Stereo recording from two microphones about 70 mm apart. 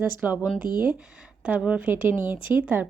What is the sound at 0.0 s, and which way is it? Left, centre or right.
Speech, right.